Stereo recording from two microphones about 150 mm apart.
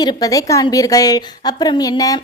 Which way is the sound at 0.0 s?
25° left (ahead or behind).